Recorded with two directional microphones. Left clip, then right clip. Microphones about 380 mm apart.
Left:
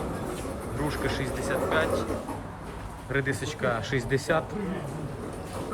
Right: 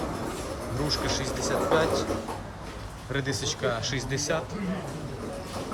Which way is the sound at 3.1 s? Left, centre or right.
Centre.